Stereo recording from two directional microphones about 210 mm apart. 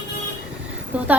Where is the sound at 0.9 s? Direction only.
5° right (ahead or behind).